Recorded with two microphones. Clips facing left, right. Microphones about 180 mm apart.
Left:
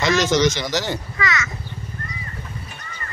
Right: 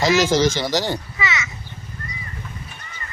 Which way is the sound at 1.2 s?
25° right (ahead or behind).